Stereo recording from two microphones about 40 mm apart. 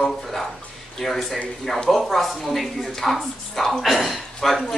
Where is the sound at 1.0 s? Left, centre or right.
Centre.